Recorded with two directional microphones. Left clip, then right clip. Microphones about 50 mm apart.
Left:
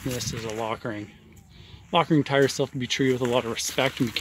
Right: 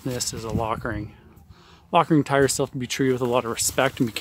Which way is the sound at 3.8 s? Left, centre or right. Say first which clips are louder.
Right 3 dB; centre.